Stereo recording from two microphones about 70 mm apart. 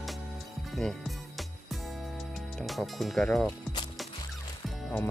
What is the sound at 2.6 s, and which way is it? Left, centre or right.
Speech, centre.